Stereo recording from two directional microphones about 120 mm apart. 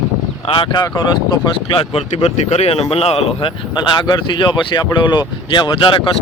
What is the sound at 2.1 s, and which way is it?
Speech, 65° left (ahead or behind).